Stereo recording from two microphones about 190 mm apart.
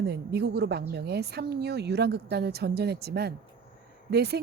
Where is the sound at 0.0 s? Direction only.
60° right (ahead or behind).